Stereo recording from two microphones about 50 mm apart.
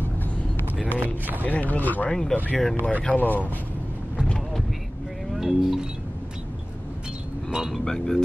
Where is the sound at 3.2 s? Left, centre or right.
Left.